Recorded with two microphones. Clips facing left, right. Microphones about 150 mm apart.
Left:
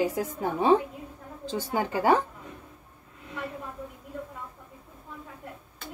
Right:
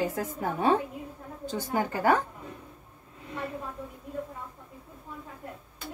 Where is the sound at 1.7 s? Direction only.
20° left (ahead or behind).